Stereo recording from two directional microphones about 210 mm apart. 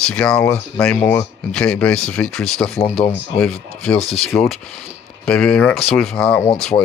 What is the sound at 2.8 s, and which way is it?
Speech, 30° left (ahead or behind).